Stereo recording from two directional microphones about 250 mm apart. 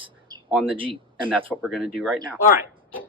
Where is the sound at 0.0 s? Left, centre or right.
Centre.